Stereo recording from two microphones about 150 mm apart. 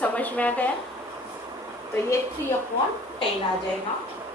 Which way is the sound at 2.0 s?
20° left (ahead or behind).